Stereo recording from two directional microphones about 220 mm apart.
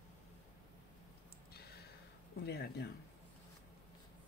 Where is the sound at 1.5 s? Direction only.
45° left (ahead or behind).